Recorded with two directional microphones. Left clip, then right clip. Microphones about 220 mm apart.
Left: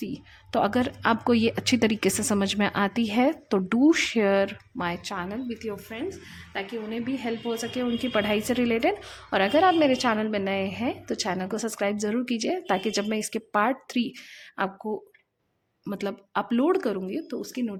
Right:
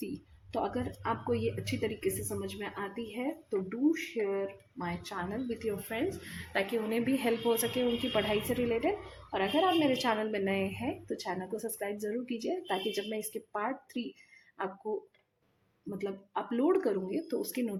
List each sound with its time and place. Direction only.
0.0 s speech: 25° left (ahead or behind)
0.6 s a woman's voice: 35° left (ahead or behind)
5.1 s a woman's voice: 20° left (ahead or behind)
5.9 s a woman's voice: centre (ahead or behind)
8.1 s a woman's voice: 25° left (ahead or behind)
15.9 s a woman's voice: 35° left (ahead or behind); by 17.7 s 10° left (ahead or behind)